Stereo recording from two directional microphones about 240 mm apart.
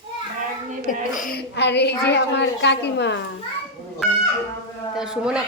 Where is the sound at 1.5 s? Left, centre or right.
Left.